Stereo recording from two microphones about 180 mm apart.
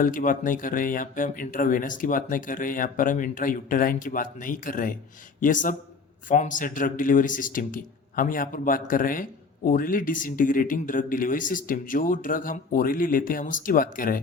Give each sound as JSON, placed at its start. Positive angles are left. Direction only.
{"t": 0.0, "sound": "speech", "side_deg": 50}